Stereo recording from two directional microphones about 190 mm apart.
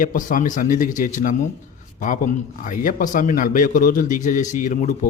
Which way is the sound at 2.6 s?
45° left (ahead or behind).